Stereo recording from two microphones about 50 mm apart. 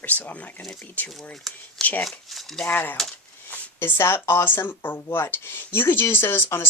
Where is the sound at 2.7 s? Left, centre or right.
Left.